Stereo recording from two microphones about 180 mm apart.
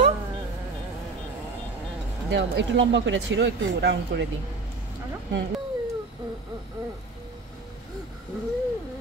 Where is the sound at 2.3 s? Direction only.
75° right (ahead or behind).